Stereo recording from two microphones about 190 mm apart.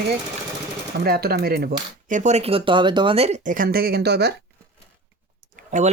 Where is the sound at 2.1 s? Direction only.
40° right (ahead or behind); by 4.3 s 60° right (ahead or behind).